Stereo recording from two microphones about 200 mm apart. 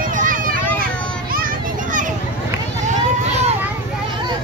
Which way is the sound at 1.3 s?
45° right (ahead or behind).